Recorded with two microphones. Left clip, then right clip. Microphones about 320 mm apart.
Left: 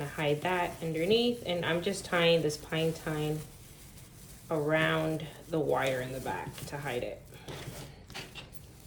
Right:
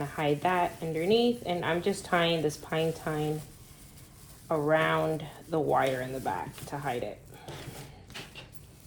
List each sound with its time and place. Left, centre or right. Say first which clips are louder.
0.0 s speech: right 3 dB; centre
4.4 s speech: right 3 dB; centre
7.5 s a sound: even; centre